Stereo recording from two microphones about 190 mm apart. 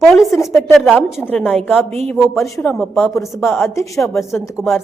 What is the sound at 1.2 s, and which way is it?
Speech, 10° left (ahead or behind).